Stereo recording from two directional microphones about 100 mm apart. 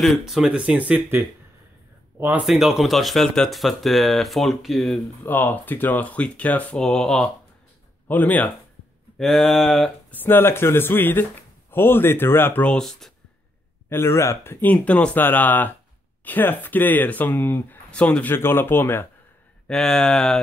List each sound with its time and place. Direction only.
0.0 s speech: centre (ahead or behind); by 2.4 s 20° right (ahead or behind)
2.4 s speech: 5° right (ahead or behind)
5.2 s speech: 20° left (ahead or behind)
6.8 s speech: 5° left (ahead or behind)
8.1 s speech: 15° left (ahead or behind)
9.2 s speech: centre (ahead or behind)
10.1 s speech: 20° left (ahead or behind)
12.6 s speech: 5° left (ahead or behind)
13.8 s speech: 25° left (ahead or behind)
18.3 s speech: 20° left (ahead or behind)
19.7 s speech: 5° left (ahead or behind)